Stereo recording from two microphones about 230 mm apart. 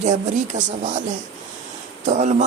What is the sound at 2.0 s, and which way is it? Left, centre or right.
Speech, right.